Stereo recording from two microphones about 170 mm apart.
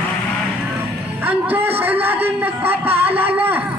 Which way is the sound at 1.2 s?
10° right (ahead or behind).